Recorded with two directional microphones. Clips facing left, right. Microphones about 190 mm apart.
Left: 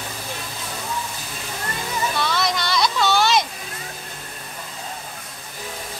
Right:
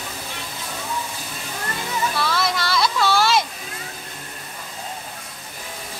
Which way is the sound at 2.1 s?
5° right (ahead or behind).